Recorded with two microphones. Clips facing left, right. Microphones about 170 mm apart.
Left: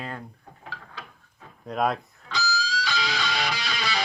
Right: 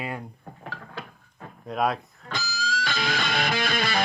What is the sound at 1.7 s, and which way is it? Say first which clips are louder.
Speech: even; centre (ahead or behind).